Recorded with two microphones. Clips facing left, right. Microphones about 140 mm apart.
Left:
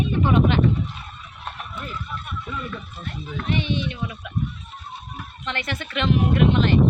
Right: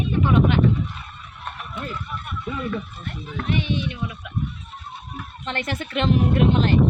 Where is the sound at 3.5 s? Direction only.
10° right (ahead or behind).